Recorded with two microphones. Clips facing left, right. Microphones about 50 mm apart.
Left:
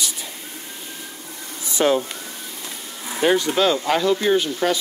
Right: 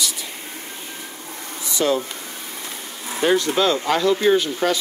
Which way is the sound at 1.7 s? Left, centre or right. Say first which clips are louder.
Left 2 dB; left.